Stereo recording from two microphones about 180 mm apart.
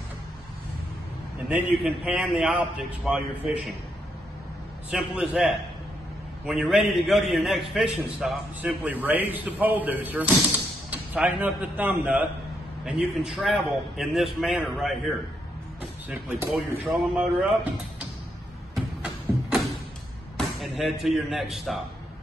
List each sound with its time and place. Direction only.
1.5 s a man's voice: 5° right (ahead or behind)
4.9 s a man's voice: 5° right (ahead or behind)
16.4 s a man's voice: centre (ahead or behind)
18.8 s a sound: centre (ahead or behind)
20.3 s speech: centre (ahead or behind)